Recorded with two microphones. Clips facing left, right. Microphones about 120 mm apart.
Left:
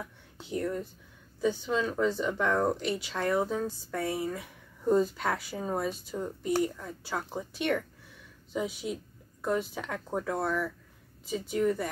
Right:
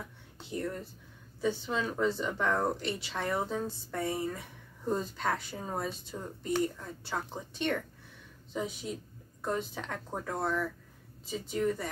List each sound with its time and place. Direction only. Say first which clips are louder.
0.5 s speech: left 4 dB; centre (ahead or behind)